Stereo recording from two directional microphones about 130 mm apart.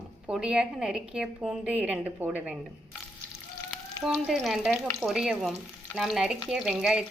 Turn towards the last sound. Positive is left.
turn(degrees=-5)  # may be behind; listen again after turning